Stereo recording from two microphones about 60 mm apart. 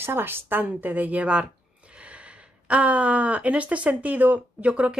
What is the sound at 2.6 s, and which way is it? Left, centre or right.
A woman's voice, right.